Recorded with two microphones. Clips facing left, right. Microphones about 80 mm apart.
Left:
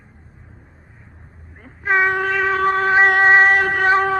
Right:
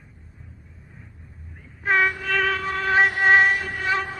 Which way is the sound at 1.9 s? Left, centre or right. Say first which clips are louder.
Left 3 dB; left.